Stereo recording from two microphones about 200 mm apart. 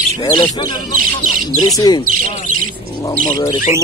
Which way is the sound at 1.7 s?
20° left (ahead or behind).